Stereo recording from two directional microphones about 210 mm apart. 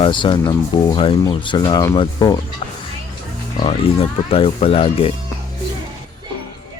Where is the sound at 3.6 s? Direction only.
25° left (ahead or behind).